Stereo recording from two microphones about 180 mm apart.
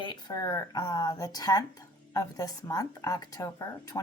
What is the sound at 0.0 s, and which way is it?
Speech, 25° left (ahead or behind).